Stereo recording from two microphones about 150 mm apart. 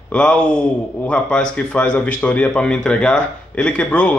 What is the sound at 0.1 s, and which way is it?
A man's voice, 5° left (ahead or behind).